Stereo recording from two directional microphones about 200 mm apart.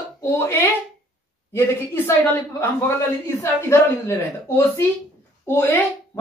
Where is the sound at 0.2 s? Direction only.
10° left (ahead or behind).